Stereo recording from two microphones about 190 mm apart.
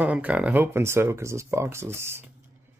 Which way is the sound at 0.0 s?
5° right (ahead or behind).